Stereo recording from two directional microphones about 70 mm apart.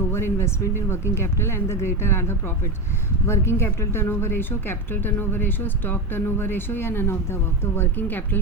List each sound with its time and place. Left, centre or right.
0.1 s speech: left